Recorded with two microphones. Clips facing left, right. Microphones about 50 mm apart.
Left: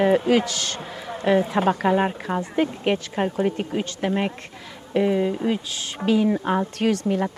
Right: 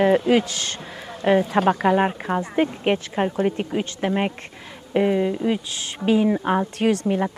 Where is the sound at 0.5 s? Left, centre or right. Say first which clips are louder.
Left 1 dB; right.